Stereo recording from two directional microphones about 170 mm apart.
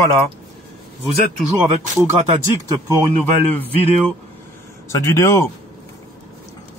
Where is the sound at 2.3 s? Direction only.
35° right (ahead or behind).